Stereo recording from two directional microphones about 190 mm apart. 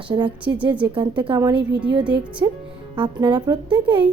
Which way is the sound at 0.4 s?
10° right (ahead or behind).